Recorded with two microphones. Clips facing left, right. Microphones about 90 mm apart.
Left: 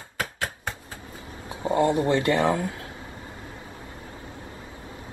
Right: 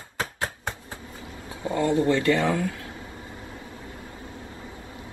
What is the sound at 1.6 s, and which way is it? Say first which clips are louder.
Speech: left 1 dB; 20° left (ahead or behind).